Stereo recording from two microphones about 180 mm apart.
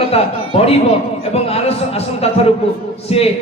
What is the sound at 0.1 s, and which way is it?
A man's voice, 35° left (ahead or behind).